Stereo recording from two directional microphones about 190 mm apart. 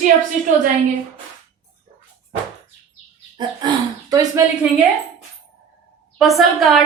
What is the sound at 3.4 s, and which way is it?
Speech, 20° right (ahead or behind).